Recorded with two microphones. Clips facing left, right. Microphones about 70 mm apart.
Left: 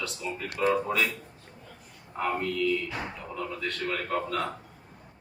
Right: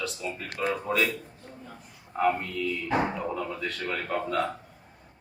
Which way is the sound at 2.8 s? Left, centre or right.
Right.